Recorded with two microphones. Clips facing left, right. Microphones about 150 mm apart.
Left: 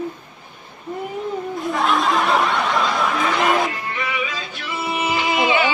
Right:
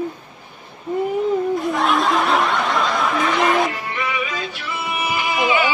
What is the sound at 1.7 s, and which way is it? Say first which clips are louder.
Snicker: left 3 dB; centre (ahead or behind).